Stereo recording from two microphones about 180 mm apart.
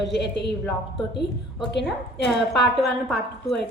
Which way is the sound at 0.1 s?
70° left (ahead or behind).